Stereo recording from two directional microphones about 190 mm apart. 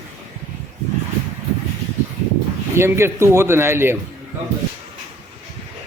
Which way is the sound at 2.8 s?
15° right (ahead or behind).